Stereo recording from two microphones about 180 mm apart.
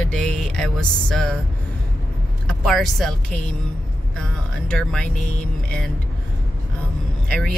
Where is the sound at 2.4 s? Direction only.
Centre (ahead or behind).